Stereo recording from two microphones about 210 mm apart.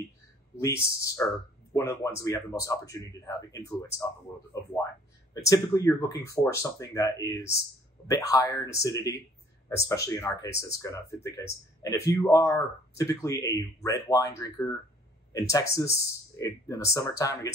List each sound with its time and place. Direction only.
0.9 s speech: 15° left (ahead or behind)
5.3 s speech: 15° left (ahead or behind)